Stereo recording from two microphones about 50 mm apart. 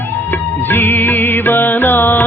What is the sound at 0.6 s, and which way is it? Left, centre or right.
Music, left.